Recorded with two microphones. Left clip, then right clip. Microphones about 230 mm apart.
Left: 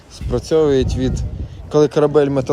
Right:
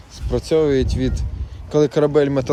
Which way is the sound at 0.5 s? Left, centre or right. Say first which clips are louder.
Left 2 dB; right.